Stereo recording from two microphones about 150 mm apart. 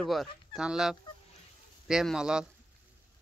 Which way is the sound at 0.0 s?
Centre (ahead or behind).